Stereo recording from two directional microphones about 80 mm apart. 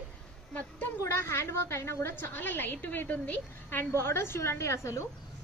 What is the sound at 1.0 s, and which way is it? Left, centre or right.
A woman's voice, left.